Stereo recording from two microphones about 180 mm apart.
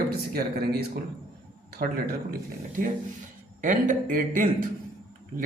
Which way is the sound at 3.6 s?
45° right (ahead or behind).